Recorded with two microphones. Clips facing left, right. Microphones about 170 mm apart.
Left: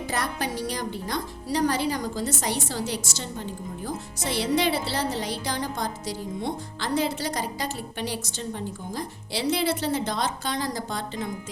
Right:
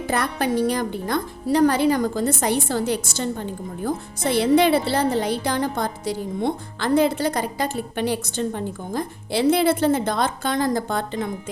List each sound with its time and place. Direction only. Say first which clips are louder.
0.1 s speech: right 8 dB; 60° right (ahead or behind)